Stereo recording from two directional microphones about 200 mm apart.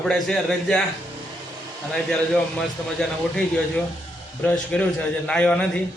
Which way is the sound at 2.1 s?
5° left (ahead or behind).